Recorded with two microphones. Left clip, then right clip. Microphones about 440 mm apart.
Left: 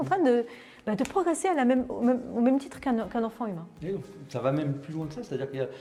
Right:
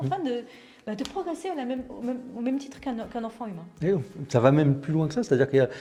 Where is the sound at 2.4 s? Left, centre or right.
Left.